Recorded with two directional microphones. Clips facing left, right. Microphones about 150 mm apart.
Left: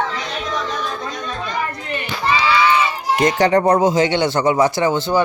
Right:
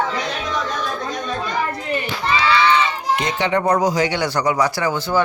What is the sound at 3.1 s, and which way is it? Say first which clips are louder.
Speech: left 7 dB; 45° left (ahead or behind).